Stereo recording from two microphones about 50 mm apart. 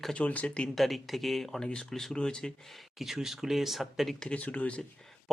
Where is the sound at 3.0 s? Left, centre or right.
Centre.